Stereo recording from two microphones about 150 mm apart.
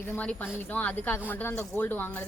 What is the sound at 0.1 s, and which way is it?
Speech, 10° left (ahead or behind).